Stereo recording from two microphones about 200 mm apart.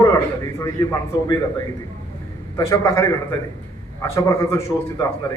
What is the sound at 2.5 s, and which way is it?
A man's voice, 15° left (ahead or behind).